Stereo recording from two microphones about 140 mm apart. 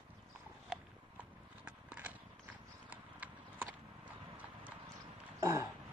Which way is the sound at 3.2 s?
10° right (ahead or behind).